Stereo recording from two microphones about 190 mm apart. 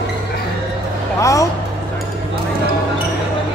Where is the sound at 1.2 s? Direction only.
15° left (ahead or behind).